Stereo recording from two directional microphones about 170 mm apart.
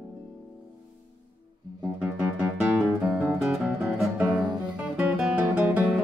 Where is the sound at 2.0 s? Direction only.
5° right (ahead or behind).